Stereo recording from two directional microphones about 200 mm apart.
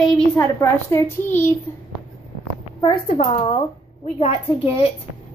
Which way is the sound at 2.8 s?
25° left (ahead or behind).